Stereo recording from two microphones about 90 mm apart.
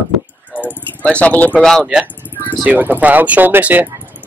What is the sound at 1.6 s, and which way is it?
Speech, 5° left (ahead or behind).